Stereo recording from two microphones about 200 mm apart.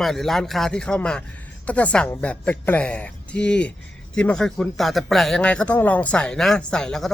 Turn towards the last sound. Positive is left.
turn(degrees=5)  # may be behind; listen again after turning